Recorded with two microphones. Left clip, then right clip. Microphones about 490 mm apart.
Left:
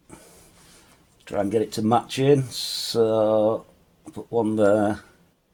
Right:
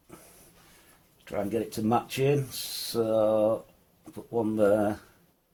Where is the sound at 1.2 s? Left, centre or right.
Right.